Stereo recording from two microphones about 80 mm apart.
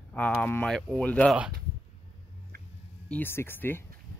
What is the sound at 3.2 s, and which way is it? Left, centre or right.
Speech, left.